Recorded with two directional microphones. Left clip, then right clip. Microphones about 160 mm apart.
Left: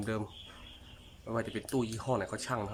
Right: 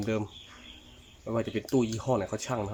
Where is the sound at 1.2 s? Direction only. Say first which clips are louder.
Right 5 dB; 20° right (ahead or behind).